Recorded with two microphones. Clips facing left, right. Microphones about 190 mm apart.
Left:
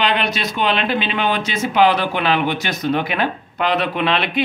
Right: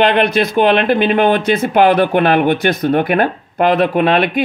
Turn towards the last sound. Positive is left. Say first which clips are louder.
# right 6 dB
turn(degrees=-50)  # may be behind; listen again after turning